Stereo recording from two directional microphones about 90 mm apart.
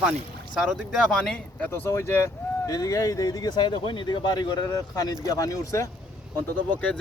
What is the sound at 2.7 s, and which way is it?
Speech, 45° left (ahead or behind).